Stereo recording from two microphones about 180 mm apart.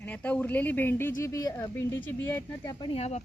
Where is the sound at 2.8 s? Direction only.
35° left (ahead or behind).